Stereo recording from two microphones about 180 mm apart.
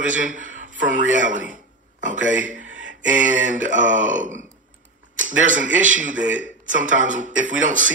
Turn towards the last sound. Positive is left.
turn(degrees=-45)  # may be behind; listen again after turning